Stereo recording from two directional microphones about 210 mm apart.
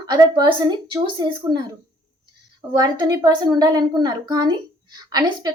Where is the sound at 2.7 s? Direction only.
20° right (ahead or behind).